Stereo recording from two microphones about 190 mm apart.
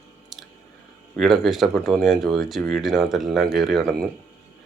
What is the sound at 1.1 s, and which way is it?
Speech, centre (ahead or behind).